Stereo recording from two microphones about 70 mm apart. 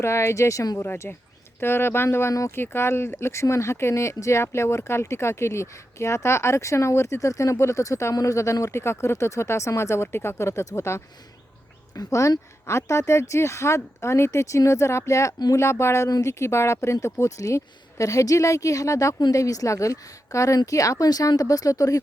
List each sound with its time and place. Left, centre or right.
0.0 s speech: left
0.8 s speech: left
16.0 s speech: left
16.3 s speech: left